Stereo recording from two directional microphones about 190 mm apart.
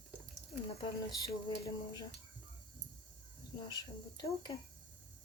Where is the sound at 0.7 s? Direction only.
30° left (ahead or behind).